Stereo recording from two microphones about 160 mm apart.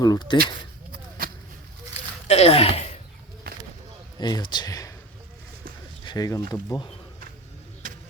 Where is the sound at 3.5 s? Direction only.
70° right (ahead or behind).